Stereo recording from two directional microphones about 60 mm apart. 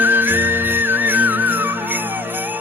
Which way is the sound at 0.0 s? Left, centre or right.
Right.